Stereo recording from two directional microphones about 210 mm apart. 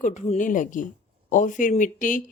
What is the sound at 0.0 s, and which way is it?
A woman's voice, 35° left (ahead or behind).